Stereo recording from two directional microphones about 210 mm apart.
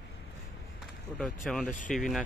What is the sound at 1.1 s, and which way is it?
Speech, 5° left (ahead or behind).